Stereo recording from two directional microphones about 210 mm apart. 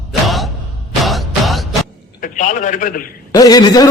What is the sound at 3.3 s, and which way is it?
Speech, 20° left (ahead or behind).